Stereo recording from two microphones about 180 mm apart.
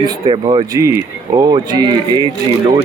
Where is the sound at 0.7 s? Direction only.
15° right (ahead or behind).